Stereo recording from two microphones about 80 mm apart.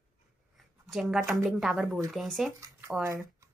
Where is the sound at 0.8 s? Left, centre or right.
Centre.